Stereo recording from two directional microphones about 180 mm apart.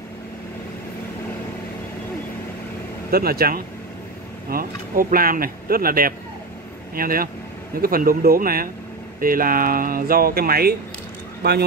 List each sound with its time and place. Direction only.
3.1 s speech: 55° right (ahead or behind)